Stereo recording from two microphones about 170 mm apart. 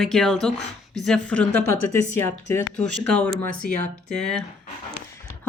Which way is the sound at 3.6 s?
55° left (ahead or behind).